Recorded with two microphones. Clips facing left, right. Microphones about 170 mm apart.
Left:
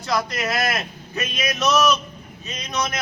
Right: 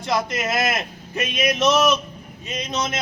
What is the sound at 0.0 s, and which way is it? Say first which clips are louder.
A man's voice: right 1 dB; 20° right (ahead or behind).